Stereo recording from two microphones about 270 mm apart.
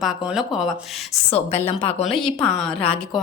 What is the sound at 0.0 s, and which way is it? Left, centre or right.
A woman's voice, centre.